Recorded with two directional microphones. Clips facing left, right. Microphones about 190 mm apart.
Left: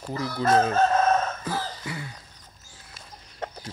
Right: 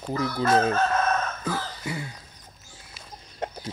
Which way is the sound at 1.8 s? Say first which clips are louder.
Right 3 dB; 25° right (ahead or behind).